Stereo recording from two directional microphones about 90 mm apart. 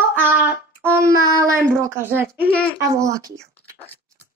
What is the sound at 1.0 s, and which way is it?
A child's voice, 35° right (ahead or behind).